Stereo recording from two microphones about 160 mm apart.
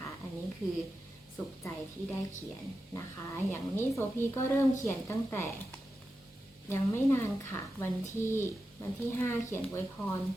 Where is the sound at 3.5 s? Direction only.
15° left (ahead or behind).